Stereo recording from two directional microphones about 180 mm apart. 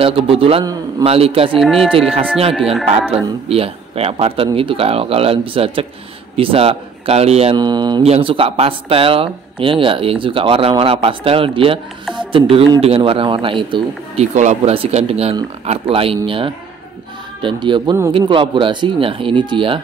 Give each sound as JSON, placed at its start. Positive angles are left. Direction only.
{"t": 0.0, "sound": "speech", "side_deg": -30}
{"t": 1.6, "sound": "speech", "side_deg": 0}
{"t": 1.9, "sound": "speech", "side_deg": -30}
{"t": 2.5, "sound": "speech", "side_deg": 0}
{"t": 3.4, "sound": "a man's voice", "side_deg": -35}
{"t": 7.5, "sound": "a man's voice", "side_deg": -25}
{"t": 14.3, "sound": "a man's voice", "side_deg": -40}